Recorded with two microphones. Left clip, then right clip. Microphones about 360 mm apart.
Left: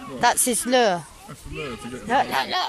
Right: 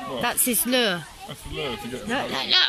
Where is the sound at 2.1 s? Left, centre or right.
Left.